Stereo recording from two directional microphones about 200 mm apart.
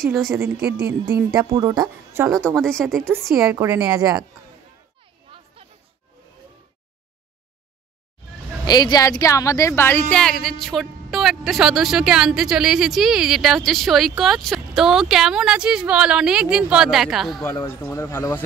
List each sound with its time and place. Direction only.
0.0 s a woman's voice: centre (ahead or behind)
1.5 s speech: 20° right (ahead or behind)
2.3 s a woman's voice: 5° left (ahead or behind)
4.0 s speech: 20° right (ahead or behind)
5.6 s music: 30° right (ahead or behind)
8.6 s a woman's voice: 20° left (ahead or behind); by 17.5 s centre (ahead or behind)
17.6 s speech: 15° left (ahead or behind)